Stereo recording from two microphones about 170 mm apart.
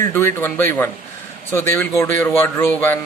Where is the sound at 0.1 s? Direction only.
15° left (ahead or behind).